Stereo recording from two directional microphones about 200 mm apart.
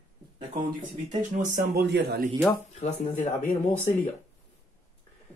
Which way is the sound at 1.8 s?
55° right (ahead or behind).